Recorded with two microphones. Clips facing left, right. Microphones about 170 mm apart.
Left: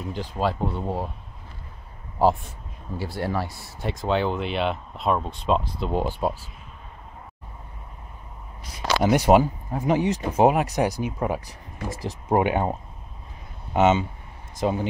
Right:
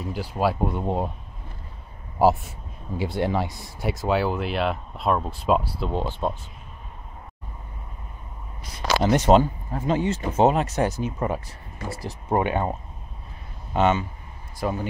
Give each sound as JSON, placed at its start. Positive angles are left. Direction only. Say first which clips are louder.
{"t": 0.0, "sound": "speech", "louder": "right 2 dB", "side_deg": -10}
{"t": 3.0, "sound": "speech", "louder": "right 3 dB", "side_deg": -20}
{"t": 4.0, "sound": "speech", "louder": "even", "side_deg": -5}
{"t": 5.9, "sound": "speech", "louder": "left 4 dB", "side_deg": 10}
{"t": 9.0, "sound": "speech", "louder": "even", "side_deg": 10}
{"t": 13.7, "sound": "speech", "louder": "left 2 dB", "side_deg": 20}